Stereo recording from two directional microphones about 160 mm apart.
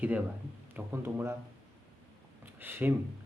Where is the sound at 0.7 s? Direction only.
15° right (ahead or behind).